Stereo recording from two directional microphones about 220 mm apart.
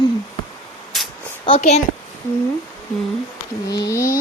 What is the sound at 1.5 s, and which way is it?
Speech, 30° left (ahead or behind).